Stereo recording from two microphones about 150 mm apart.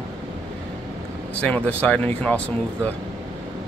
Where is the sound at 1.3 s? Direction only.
10° left (ahead or behind).